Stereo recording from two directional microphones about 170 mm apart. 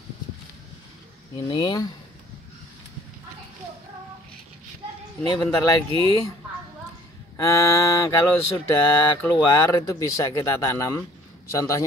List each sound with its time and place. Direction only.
1.3 s mantra: 25° left (ahead or behind)
5.2 s mantra: 25° left (ahead or behind)
7.3 s mantra: 20° left (ahead or behind)